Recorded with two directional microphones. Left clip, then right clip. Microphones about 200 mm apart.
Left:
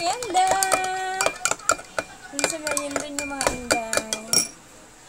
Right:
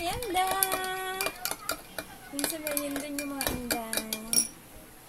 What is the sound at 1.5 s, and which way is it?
Dishes, 15° left (ahead or behind).